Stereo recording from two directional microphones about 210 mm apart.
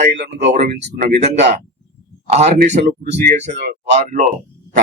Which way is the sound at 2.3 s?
30° right (ahead or behind).